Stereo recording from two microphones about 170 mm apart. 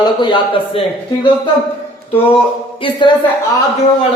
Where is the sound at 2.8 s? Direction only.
30° left (ahead or behind).